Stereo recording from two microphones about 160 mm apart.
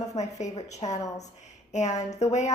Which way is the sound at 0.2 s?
45° left (ahead or behind).